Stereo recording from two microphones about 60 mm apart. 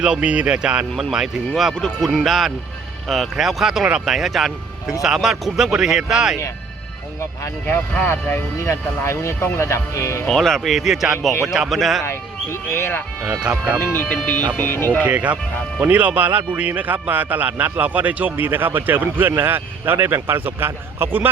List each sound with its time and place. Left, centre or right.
0.0 s a man's voice: centre
0.9 s speech: centre
1.7 s a man's voice: centre
8.0 s speech: left
10.2 s speech: centre
12.0 s speech: left
13.5 s a man's voice: centre
13.8 s speech: left
15.0 s a man's voice: right